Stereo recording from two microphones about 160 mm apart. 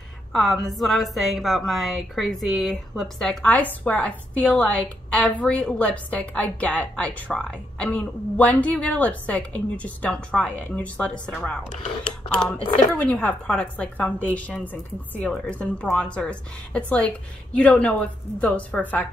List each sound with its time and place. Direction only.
0.3 s a woman's voice: centre (ahead or behind)
11.7 s speech: 40° left (ahead or behind)
12.4 s a woman's voice: 5° left (ahead or behind)